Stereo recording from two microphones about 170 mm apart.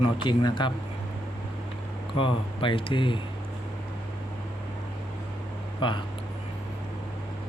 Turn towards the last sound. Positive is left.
turn(degrees=30)  # may be behind; listen again after turning